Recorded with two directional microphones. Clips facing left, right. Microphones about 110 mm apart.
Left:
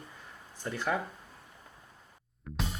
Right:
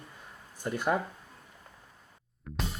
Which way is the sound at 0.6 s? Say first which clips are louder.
Right 3 dB; 20° right (ahead or behind).